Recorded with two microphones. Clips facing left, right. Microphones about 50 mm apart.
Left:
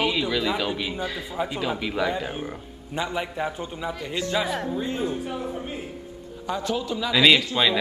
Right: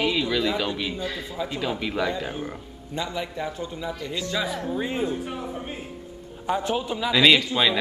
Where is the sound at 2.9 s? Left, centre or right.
Left.